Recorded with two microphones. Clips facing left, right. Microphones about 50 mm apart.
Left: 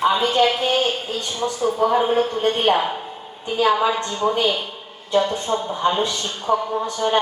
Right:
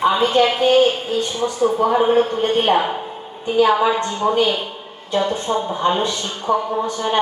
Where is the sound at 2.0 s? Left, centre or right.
Centre.